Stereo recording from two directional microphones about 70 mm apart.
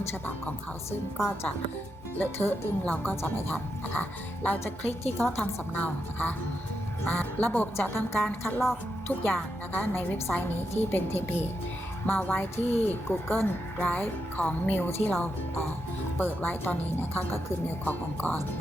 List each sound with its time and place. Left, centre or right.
2.1 s a woman's voice: left
7.8 s a woman's voice: left